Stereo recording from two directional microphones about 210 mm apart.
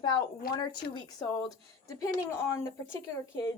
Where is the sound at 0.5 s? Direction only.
20° left (ahead or behind).